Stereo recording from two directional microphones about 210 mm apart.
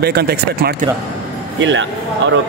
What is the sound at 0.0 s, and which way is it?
Speech, 50° right (ahead or behind).